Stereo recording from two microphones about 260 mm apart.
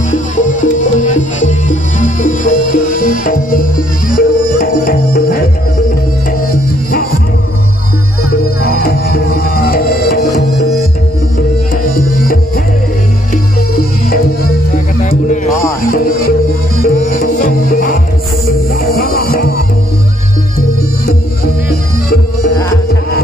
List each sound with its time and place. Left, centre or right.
0.1 s music: left
8.6 s music: left
13.7 s music: left
15.8 s music: left
18.9 s music: left